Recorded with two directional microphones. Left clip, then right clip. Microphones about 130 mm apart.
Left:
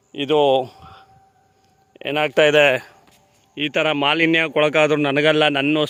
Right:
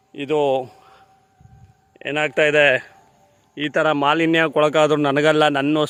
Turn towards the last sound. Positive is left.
turn(degrees=0)  # may be behind; listen again after turning